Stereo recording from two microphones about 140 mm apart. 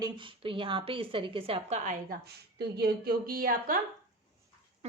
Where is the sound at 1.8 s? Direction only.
65° right (ahead or behind).